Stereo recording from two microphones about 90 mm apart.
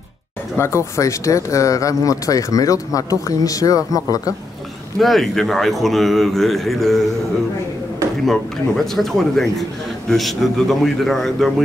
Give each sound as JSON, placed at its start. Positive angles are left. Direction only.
{"t": 0.6, "sound": "speech", "side_deg": 30}
{"t": 4.9, "sound": "a man's voice", "side_deg": 0}
{"t": 8.3, "sound": "a man's voice", "side_deg": 0}